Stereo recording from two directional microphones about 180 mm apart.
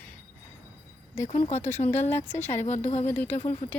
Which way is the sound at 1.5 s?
40° left (ahead or behind).